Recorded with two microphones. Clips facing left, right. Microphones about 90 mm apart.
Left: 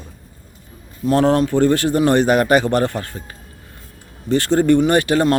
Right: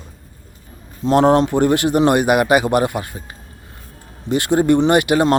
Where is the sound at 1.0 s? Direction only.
20° right (ahead or behind).